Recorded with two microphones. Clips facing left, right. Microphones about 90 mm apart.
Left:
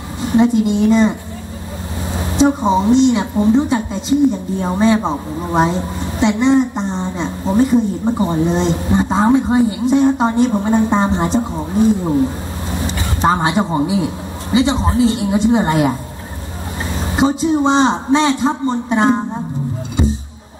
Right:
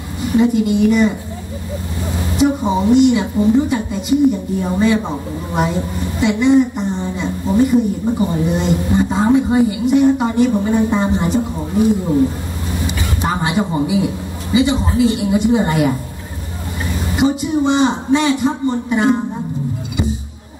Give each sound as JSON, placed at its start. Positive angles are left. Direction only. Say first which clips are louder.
{"t": 0.2, "sound": "a woman's voice", "louder": "left 1 dB", "side_deg": 25}
{"t": 2.1, "sound": "a woman's voice", "louder": "left 2 dB", "side_deg": 25}
{"t": 13.2, "sound": "a woman's voice", "louder": "left 4 dB", "side_deg": 25}
{"t": 17.1, "sound": "a woman's voice", "louder": "left 2 dB", "side_deg": 25}